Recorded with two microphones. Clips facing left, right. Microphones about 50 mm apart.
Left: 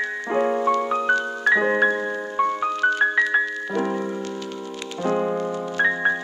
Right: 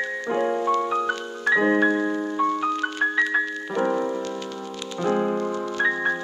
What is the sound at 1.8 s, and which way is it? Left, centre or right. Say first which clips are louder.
Music: even; centre.